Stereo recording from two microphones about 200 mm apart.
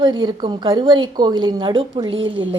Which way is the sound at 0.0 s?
20° right (ahead or behind).